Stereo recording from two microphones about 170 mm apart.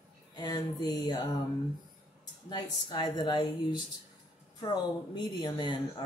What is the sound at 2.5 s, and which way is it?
Speech, 25° left (ahead or behind).